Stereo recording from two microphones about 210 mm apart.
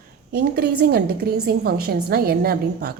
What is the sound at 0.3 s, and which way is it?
A woman's voice, 45° right (ahead or behind).